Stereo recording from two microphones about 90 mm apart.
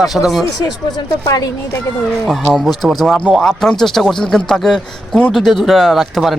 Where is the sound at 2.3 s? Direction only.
Centre (ahead or behind).